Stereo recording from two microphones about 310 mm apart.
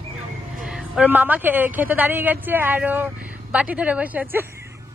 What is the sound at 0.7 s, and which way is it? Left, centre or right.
A woman's voice, centre.